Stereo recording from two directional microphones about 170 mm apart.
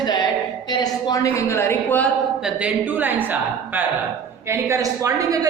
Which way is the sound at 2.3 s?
5° right (ahead or behind).